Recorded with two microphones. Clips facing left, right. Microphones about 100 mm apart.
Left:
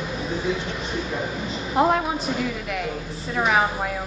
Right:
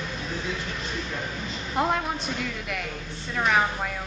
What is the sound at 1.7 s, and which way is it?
A woman's voice, 5° left (ahead or behind).